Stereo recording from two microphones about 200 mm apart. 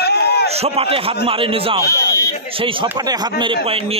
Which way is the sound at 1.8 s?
50° left (ahead or behind).